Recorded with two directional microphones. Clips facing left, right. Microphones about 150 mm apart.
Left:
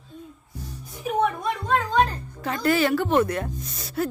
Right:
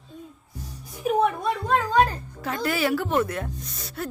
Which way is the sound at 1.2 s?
5° right (ahead or behind).